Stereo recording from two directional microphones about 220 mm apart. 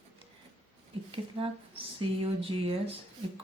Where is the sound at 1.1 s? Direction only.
25° right (ahead or behind).